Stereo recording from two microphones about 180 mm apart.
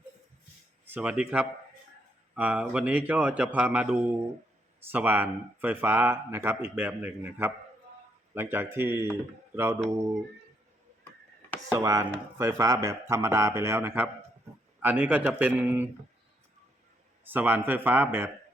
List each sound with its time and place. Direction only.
0.9 s speech: 5° right (ahead or behind)
11.8 s speech: 15° right (ahead or behind)
17.2 s speech: 10° right (ahead or behind)